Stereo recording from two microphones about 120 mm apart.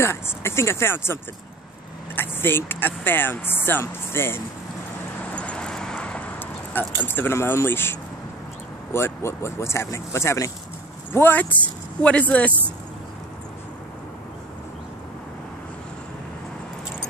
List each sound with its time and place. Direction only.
0.0 s speech: 20° left (ahead or behind)
5.3 s vehicle: 10° left (ahead or behind)
8.9 s speech: 20° left (ahead or behind)